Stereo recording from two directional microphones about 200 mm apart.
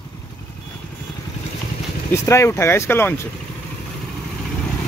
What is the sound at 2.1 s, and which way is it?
Speech, 15° left (ahead or behind).